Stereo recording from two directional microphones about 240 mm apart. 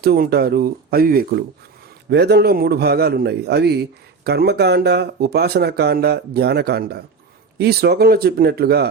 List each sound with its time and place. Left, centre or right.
0.0 s a man's voice: right